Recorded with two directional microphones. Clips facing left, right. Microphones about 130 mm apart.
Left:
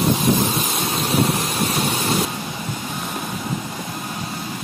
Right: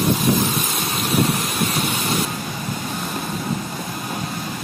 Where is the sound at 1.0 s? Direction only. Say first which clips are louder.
Even; 30° left (ahead or behind).